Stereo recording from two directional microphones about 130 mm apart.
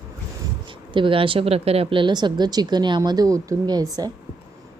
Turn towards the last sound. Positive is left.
turn(degrees=-30)  # may be behind; listen again after turning